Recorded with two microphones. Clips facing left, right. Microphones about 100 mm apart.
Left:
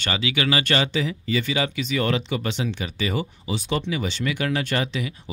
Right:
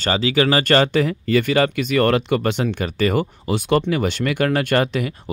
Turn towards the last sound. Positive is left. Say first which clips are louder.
# right 7 dB
turn(degrees=-50)  # may be behind; listen again after turning